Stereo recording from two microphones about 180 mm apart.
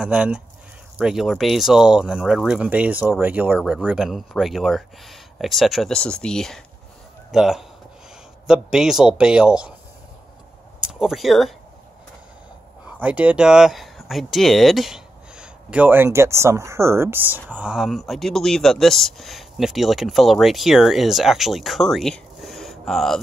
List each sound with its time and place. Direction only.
0.0 s speech: 5° right (ahead or behind)
10.8 s speech: 5° right (ahead or behind)
12.8 s speech: 5° right (ahead or behind)